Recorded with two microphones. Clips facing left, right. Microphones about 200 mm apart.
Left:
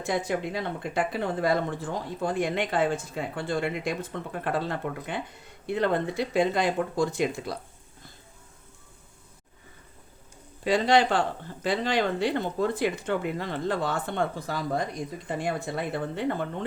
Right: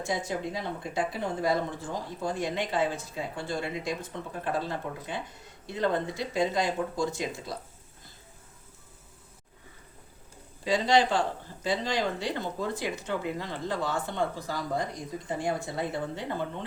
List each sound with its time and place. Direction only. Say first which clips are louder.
0.0 s speech: left 3 dB; 65° left (ahead or behind)
10.6 s speech: left 2 dB; 60° left (ahead or behind)